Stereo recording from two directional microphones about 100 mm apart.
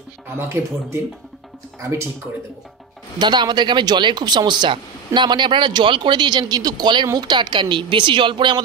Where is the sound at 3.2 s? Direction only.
50° right (ahead or behind).